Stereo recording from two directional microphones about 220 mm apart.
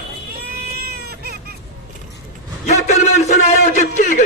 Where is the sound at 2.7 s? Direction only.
30° left (ahead or behind).